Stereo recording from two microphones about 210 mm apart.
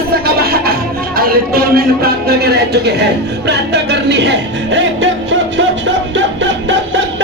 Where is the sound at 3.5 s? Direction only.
55° right (ahead or behind).